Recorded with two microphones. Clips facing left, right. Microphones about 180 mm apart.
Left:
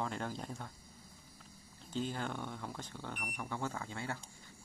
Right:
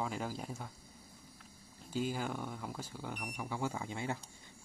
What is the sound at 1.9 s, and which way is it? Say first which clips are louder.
Speech: right 2 dB; 10° right (ahead or behind).